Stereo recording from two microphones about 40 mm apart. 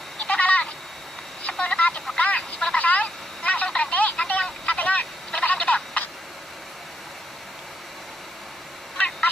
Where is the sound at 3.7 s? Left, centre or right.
Left.